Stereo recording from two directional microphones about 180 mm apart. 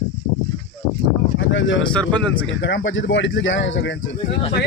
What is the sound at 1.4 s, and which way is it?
Speech, 90° left.